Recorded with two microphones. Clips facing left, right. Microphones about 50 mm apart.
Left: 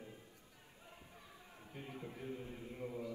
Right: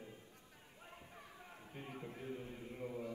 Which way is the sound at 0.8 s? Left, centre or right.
Right.